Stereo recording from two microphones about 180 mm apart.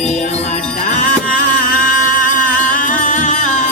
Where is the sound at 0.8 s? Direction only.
45° left (ahead or behind).